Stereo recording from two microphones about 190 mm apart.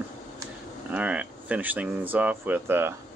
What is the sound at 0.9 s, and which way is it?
Speech, 5° right (ahead or behind).